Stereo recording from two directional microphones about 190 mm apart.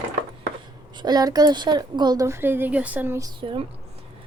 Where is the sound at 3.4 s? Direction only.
25° right (ahead or behind).